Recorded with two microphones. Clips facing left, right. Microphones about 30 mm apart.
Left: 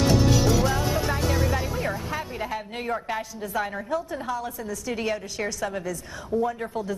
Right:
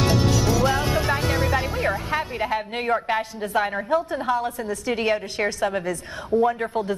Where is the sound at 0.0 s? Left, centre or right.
Right.